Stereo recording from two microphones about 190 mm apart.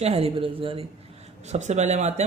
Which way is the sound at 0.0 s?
30° right (ahead or behind).